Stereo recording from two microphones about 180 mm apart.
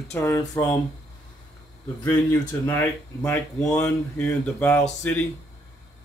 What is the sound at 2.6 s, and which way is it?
Speech, 15° left (ahead or behind).